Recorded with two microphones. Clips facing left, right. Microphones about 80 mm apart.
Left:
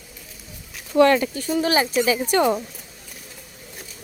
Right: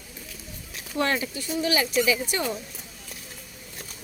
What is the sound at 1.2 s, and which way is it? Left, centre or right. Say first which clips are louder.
Speech: left 6 dB; left.